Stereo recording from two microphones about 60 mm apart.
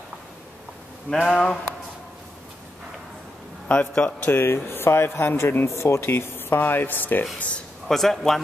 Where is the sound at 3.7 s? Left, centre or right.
Left.